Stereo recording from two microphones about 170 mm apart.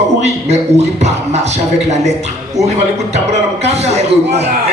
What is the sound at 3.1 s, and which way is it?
Music, 40° right (ahead or behind).